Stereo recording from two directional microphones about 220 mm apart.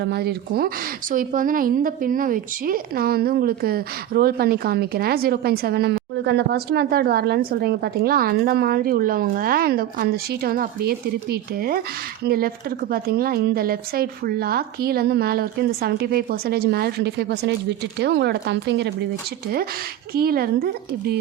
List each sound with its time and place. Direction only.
0.0 s a woman's voice: 45° right (ahead or behind)
20.1 s a woman's voice: 45° right (ahead or behind)